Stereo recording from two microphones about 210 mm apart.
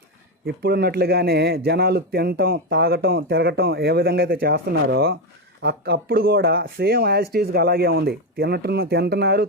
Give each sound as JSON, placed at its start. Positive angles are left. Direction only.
{"t": 0.4, "sound": "a man's voice", "side_deg": -50}